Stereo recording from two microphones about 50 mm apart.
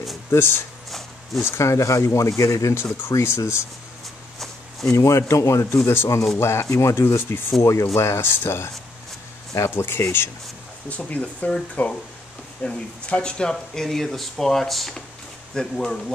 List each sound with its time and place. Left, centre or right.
0.3 s speech: left
0.8 s a sound: centre
1.6 s speech: left
4.4 s a sound: centre
4.9 s a man's voice: left
6.3 s speech: left
7.0 s speech: left
7.6 s speech: left
9.8 s speech: left
10.9 s speech: left
12.6 s speech: centre
15.5 s speech: centre